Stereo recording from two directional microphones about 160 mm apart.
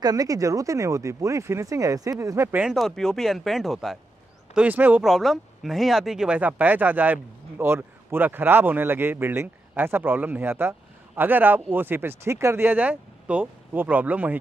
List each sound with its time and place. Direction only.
0.0 s speech: 25° right (ahead or behind)
2.6 s speech: centre (ahead or behind)
4.6 s speech: 10° right (ahead or behind)